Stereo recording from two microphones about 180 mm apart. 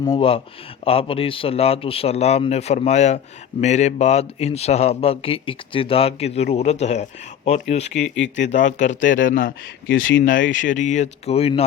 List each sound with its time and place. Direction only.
0.2 s a man's voice: 30° left (ahead or behind); by 9.6 s 50° left (ahead or behind)
9.9 s speech: 90° left
10.6 s a man's voice: 45° left (ahead or behind)